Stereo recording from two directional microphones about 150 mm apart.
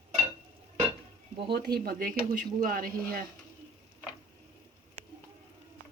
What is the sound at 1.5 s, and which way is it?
Speech, 90° right.